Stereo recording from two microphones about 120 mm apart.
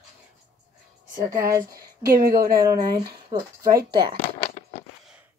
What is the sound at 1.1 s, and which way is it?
Speech, 30° right (ahead or behind).